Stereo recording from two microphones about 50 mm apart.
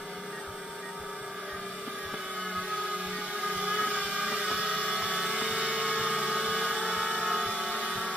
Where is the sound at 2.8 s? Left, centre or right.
Right.